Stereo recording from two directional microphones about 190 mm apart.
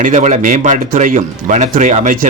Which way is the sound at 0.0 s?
40° right (ahead or behind).